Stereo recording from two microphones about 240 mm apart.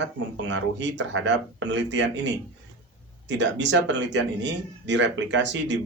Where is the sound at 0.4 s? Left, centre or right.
Right.